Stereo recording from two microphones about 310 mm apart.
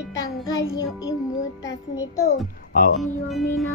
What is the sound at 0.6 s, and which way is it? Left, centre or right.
Music, centre.